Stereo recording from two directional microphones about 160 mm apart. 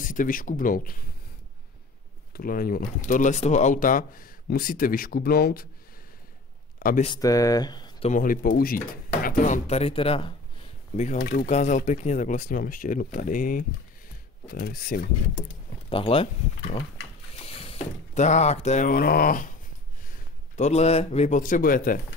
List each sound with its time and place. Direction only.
0.0 s speech: 55° left (ahead or behind)
2.3 s speech: 65° left (ahead or behind)
6.8 s speech: 65° left (ahead or behind)
7.2 s speech: 20° left (ahead or behind)
8.1 s speech: 60° left (ahead or behind); by 10.3 s 35° left (ahead or behind)
11.1 s speech: 75° left (ahead or behind)
11.4 s speech: 50° left (ahead or behind); by 15.0 s 65° left (ahead or behind)
15.9 s speech: 35° left (ahead or behind); by 19.5 s 60° left (ahead or behind)
20.5 s speech: 45° left (ahead or behind)
21.4 s speech: 60° left (ahead or behind)